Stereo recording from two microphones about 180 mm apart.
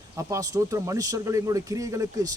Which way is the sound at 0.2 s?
20° right (ahead or behind).